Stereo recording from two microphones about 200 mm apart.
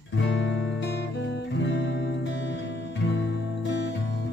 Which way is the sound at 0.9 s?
60° left (ahead or behind).